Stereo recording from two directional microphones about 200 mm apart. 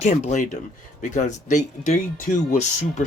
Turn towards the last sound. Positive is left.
turn(degrees=40)  # may be behind; listen again after turning